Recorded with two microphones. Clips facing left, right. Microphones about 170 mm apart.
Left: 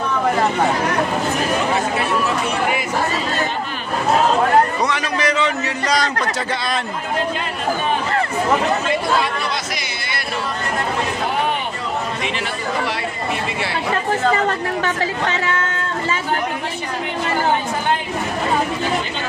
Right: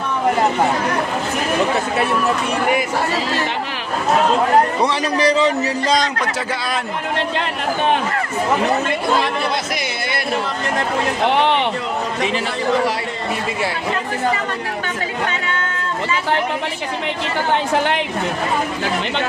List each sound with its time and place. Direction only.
4.8 s a man's voice: 35° right (ahead or behind)
11.2 s speech: 75° right (ahead or behind)